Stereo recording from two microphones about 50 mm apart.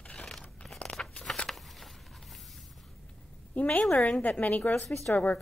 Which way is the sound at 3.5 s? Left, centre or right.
Left.